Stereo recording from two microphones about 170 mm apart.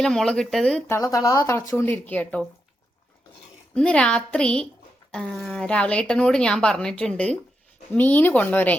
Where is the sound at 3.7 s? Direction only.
5° left (ahead or behind).